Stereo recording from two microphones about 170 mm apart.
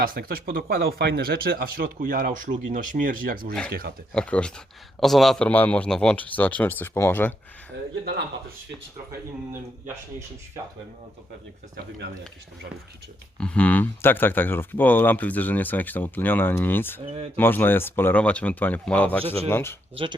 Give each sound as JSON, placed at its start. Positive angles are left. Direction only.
{"t": 0.0, "sound": "speech", "side_deg": -60}
{"t": 3.7, "sound": "speech", "side_deg": -70}
{"t": 4.1, "sound": "speech", "side_deg": 5}
{"t": 8.0, "sound": "speech", "side_deg": -70}
{"t": 9.5, "sound": "speech", "side_deg": -15}
{"t": 13.4, "sound": "speech", "side_deg": 5}